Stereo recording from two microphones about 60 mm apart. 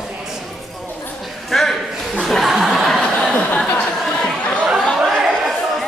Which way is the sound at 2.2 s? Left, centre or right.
Centre.